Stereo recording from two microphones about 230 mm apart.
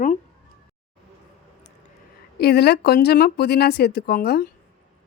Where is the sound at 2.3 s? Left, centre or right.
Left.